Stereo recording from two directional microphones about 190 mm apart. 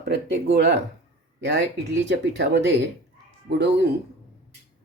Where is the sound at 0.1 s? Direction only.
65° right (ahead or behind).